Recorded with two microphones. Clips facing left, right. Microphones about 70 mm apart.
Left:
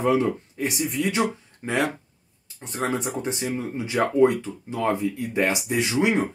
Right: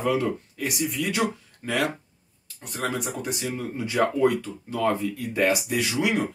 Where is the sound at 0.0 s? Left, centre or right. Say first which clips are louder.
Left 3 dB; left.